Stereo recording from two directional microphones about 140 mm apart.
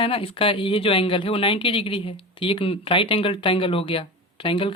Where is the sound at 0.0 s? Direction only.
40° left (ahead or behind).